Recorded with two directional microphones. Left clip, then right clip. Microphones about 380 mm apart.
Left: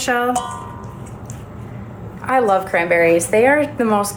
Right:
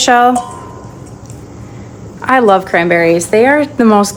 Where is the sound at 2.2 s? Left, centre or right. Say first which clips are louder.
Right 7 dB; right.